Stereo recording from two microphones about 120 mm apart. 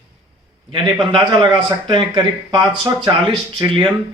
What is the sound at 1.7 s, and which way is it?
A man's voice, 40° right (ahead or behind).